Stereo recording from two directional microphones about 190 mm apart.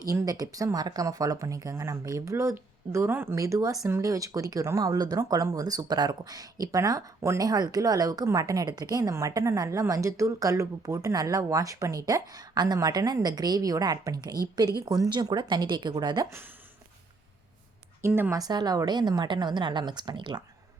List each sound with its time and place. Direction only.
0.0 s speech: 15° right (ahead or behind)
18.0 s speech: 15° right (ahead or behind)